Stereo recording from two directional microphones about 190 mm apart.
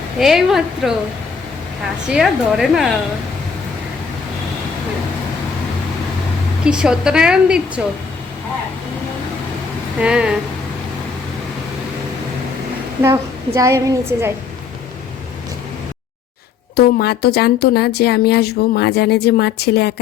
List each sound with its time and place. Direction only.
0.2 s a woman's voice: centre (ahead or behind)
2.0 s a woman's voice: centre (ahead or behind)
6.7 s a woman's voice: 5° right (ahead or behind)
10.0 s a woman's voice: 5° right (ahead or behind)
13.0 s a woman's voice: 15° right (ahead or behind)
16.7 s a woman's voice: 55° left (ahead or behind)